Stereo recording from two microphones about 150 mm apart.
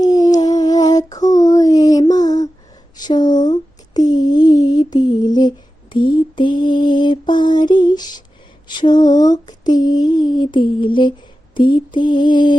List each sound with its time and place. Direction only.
0.0 s a sound: 25° left (ahead or behind)
6.3 s mantra: 30° left (ahead or behind)
8.6 s female singing: 30° left (ahead or behind)
11.5 s mantra: 30° left (ahead or behind)